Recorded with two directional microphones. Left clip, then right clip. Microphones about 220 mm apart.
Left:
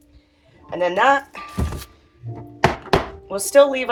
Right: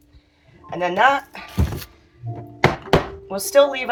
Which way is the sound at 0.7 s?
20° left (ahead or behind).